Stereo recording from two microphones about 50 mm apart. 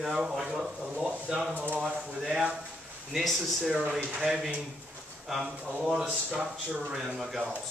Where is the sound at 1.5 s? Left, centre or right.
Right.